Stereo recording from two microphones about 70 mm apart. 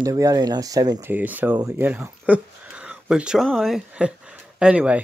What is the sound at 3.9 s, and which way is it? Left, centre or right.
Speech, centre.